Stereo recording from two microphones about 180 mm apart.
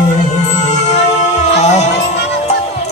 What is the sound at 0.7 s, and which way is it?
Music, 40° left (ahead or behind).